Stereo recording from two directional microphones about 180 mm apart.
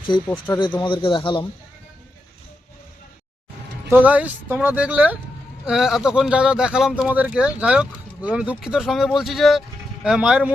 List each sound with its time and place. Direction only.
0.3 s speech: 10° left (ahead or behind)
0.6 s a man's voice: 25° left (ahead or behind)
3.8 s a man's voice: 10° right (ahead or behind)